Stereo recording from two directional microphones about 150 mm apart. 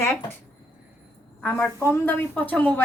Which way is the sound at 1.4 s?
10° left (ahead or behind).